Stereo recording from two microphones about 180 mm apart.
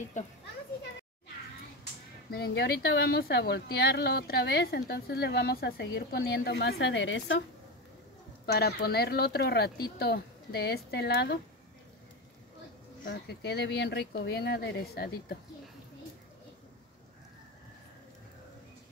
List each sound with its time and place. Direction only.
0.2 s a child's voice: 40° left (ahead or behind)
2.3 s a woman's voice: 65° left (ahead or behind); by 7.4 s 90° left
8.5 s a woman's voice: 60° left (ahead or behind)
13.0 s speech: 80° left